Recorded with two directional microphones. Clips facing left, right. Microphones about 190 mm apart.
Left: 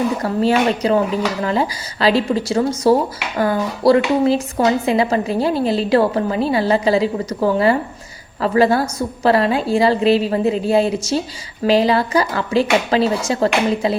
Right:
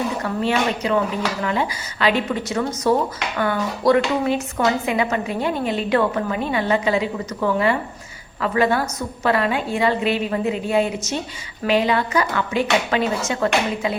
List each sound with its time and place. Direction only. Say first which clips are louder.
0.2 s speech: left 5 dB; 35° left (ahead or behind)